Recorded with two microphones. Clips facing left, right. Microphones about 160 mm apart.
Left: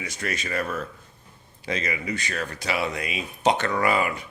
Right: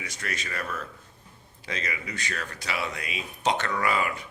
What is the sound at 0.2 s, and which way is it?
A man's voice, 20° left (ahead or behind).